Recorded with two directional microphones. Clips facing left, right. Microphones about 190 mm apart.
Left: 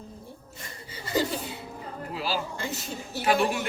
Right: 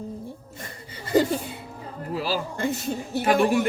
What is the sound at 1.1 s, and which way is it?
Chuckle, 55° right (ahead or behind).